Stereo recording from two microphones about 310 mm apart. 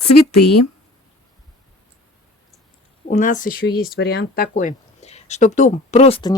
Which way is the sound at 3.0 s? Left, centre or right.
Left.